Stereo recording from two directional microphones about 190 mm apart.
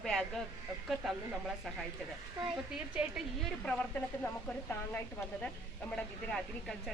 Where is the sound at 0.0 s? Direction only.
Centre (ahead or behind).